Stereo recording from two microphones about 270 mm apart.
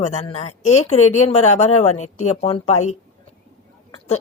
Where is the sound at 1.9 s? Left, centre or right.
Left.